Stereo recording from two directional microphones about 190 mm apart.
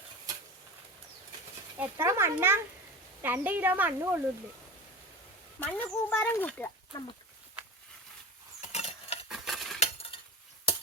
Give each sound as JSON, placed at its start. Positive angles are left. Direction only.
{"t": 1.8, "sound": "speech", "side_deg": -10}
{"t": 5.5, "sound": "speech", "side_deg": 10}
{"t": 8.6, "sound": "mechanisms", "side_deg": 35}
{"t": 9.3, "sound": "stir", "side_deg": 0}
{"t": 9.8, "sound": "chink", "side_deg": 30}